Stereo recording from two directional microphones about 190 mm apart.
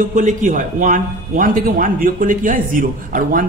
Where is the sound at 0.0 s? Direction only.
45° right (ahead or behind).